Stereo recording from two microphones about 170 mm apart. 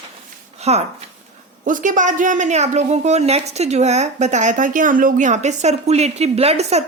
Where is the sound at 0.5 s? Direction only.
40° right (ahead or behind).